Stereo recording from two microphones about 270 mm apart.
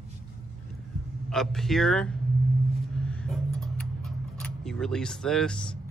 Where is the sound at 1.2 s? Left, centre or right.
Centre.